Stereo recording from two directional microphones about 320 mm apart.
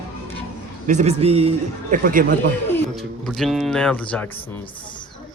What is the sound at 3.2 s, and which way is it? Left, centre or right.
Speech, centre.